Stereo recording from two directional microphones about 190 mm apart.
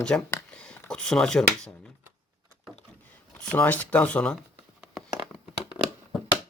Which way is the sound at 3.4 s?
10° left (ahead or behind).